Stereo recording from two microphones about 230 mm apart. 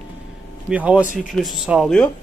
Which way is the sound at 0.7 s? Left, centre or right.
Centre.